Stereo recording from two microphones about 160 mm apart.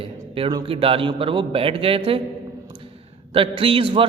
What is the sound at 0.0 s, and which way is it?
A man's voice, 35° right (ahead or behind).